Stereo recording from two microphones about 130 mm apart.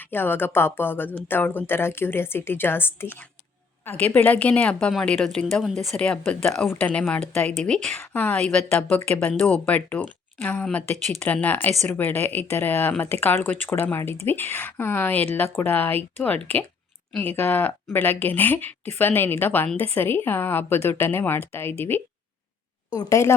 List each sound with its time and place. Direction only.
0.0 s speech: 15° left (ahead or behind)
22.9 s a woman's voice: 25° left (ahead or behind)